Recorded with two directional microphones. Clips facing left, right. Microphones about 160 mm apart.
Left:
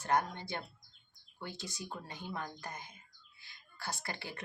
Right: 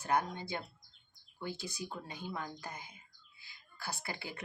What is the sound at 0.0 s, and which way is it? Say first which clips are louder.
Speech: left 1 dB; 15° right (ahead or behind).